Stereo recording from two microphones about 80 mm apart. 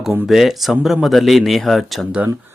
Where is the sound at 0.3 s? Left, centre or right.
Centre.